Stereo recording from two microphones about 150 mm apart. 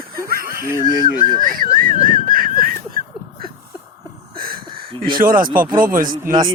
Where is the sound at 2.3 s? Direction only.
70° right (ahead or behind).